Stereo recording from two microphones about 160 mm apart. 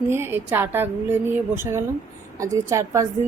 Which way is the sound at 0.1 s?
15° right (ahead or behind).